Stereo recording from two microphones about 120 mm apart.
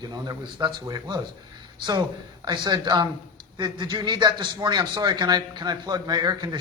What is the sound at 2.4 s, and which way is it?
A man's voice, 35° right (ahead or behind).